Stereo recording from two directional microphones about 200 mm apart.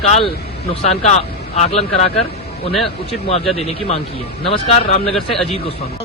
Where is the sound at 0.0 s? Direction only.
30° left (ahead or behind).